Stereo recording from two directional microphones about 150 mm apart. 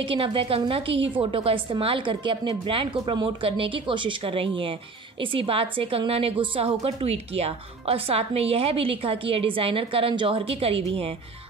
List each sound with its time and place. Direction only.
0.0 s a woman's voice: 35° right (ahead or behind)